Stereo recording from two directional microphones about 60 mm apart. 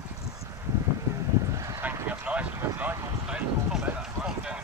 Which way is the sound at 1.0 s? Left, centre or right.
Right.